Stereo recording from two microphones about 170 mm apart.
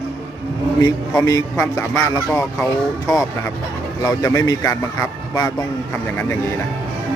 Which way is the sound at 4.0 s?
20° left (ahead or behind).